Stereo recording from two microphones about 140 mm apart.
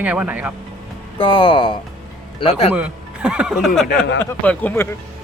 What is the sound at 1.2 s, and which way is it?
A man's voice, 40° left (ahead or behind).